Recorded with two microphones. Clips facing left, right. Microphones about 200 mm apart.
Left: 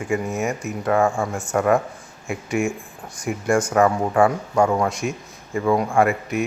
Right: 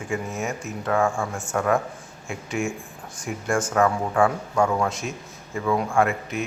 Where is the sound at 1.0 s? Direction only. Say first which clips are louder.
Left 3 dB; 20° left (ahead or behind).